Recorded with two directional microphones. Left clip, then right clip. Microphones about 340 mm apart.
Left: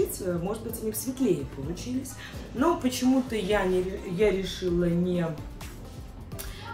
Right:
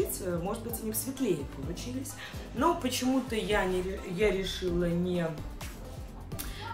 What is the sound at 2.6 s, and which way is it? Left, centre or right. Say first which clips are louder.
Speech: left 3 dB; centre.